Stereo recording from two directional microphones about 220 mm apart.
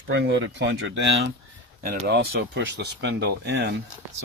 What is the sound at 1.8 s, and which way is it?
Speech, 40° right (ahead or behind).